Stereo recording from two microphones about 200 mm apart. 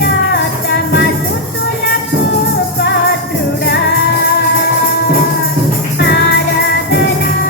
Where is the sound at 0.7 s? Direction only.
55° left (ahead or behind).